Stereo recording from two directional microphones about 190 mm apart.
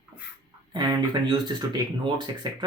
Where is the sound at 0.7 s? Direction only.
20° right (ahead or behind).